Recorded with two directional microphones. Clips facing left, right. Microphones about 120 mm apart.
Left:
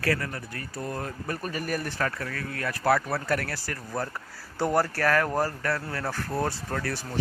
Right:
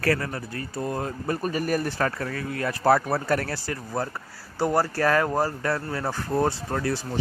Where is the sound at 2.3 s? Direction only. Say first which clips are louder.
Right 4 dB; 25° right (ahead or behind).